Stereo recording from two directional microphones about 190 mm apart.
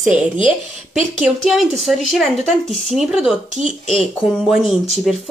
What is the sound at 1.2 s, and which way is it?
Speech, centre (ahead or behind).